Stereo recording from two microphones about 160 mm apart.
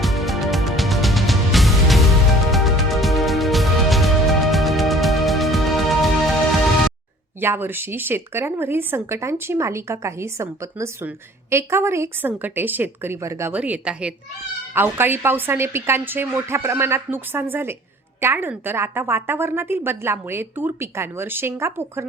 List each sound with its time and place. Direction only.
0.0 s music: centre (ahead or behind)
7.4 s a woman's voice: 15° right (ahead or behind)